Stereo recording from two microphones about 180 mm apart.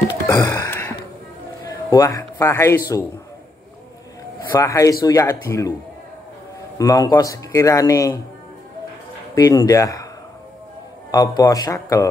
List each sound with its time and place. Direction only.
0.1 s a sound: 20° left (ahead or behind)
1.6 s a man's voice: 20° left (ahead or behind)
4.5 s speech: 20° left (ahead or behind)
6.8 s speech: 20° left (ahead or behind)
9.3 s speech: 20° left (ahead or behind)
11.1 s speech: 20° left (ahead or behind)